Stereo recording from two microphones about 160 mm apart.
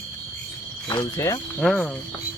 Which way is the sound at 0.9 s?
20° left (ahead or behind).